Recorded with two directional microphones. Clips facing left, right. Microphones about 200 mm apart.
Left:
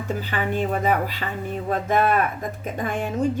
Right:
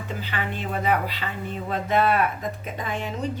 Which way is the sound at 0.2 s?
45° left (ahead or behind).